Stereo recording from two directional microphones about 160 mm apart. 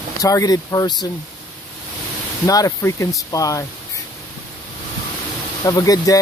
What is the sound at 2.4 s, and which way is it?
Speech, 20° left (ahead or behind).